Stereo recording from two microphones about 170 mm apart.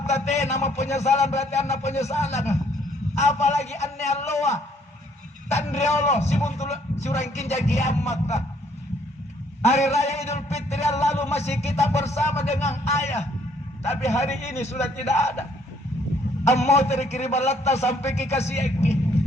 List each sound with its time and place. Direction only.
0.0 s a man's voice: 40° left (ahead or behind)
9.9 s a man's voice: 40° left (ahead or behind)
12.0 s speech: 15° left (ahead or behind)
12.5 s a man's voice: 40° left (ahead or behind)
15.1 s speech: 15° left (ahead or behind)
16.4 s a man's voice: 40° left (ahead or behind)